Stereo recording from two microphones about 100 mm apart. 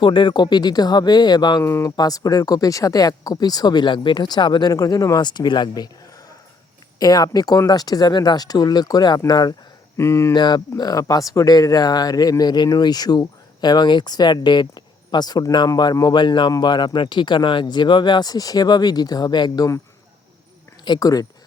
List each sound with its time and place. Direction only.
0.0 s speech: 55° left (ahead or behind)
1.6 s speech: 25° left (ahead or behind)
2.0 s speech: 40° left (ahead or behind)
4.7 s speech: 35° left (ahead or behind)
10.0 s speech: 25° left (ahead or behind)
10.3 s speech: 45° left (ahead or behind)
20.8 s speech: 40° left (ahead or behind)